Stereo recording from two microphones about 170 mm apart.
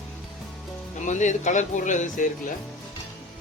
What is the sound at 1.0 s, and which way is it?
Speech, 45° left (ahead or behind).